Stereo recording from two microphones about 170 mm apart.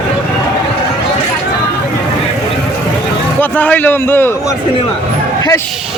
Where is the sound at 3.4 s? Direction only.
10° left (ahead or behind).